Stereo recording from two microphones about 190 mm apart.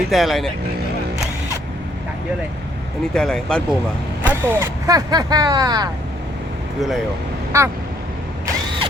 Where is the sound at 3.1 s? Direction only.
5° left (ahead or behind).